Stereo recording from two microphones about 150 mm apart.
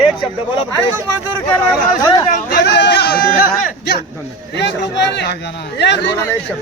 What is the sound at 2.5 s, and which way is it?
Speech, 90° left.